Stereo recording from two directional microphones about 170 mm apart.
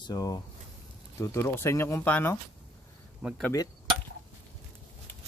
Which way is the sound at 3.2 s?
10° right (ahead or behind).